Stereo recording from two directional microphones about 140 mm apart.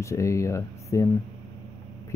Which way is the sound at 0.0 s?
20° left (ahead or behind).